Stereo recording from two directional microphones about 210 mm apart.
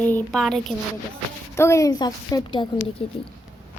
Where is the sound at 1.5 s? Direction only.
15° left (ahead or behind).